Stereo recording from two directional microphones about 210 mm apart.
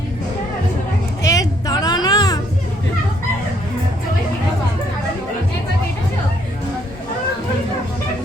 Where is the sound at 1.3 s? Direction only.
15° left (ahead or behind).